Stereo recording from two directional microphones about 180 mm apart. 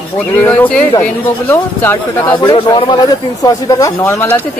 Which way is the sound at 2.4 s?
25° left (ahead or behind).